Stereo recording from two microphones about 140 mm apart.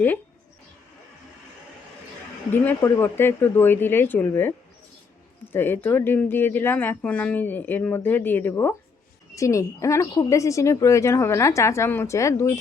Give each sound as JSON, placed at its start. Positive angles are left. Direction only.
{"t": 2.5, "sound": "speech", "side_deg": 15}